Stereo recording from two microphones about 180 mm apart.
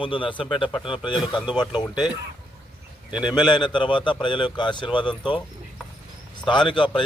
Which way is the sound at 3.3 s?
25° left (ahead or behind).